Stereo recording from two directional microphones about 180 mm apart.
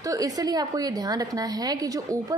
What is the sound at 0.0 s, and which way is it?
A woman's voice, 20° right (ahead or behind).